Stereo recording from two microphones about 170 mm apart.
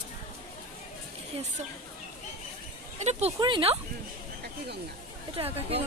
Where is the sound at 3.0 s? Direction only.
40° right (ahead or behind).